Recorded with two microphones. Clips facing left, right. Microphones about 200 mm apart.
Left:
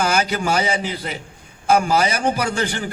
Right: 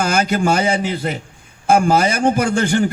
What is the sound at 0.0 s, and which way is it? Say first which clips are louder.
A man's voice: right 3 dB; 50° right (ahead or behind).